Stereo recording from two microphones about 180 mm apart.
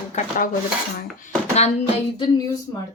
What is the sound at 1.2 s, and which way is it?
Speech, 40° left (ahead or behind).